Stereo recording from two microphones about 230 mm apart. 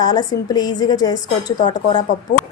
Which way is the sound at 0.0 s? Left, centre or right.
Centre.